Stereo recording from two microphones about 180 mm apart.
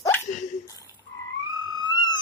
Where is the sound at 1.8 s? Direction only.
25° left (ahead or behind).